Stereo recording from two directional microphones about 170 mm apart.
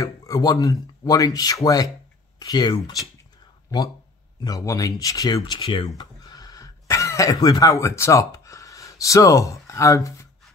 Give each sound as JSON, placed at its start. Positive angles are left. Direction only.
{"t": 0.0, "sound": "speech", "side_deg": 20}
{"t": 4.4, "sound": "speech", "side_deg": 20}